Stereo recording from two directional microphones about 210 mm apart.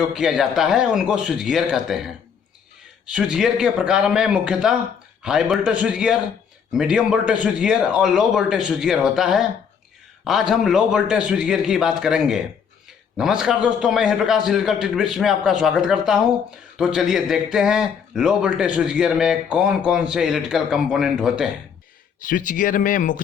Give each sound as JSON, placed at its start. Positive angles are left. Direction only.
{"t": 0.1, "sound": "a man's voice", "side_deg": 0}
{"t": 13.4, "sound": "a man's voice", "side_deg": -5}
{"t": 22.2, "sound": "speech", "side_deg": 40}